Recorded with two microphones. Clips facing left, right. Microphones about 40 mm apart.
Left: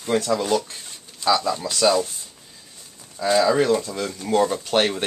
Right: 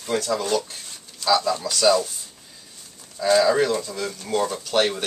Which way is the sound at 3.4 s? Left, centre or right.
Centre.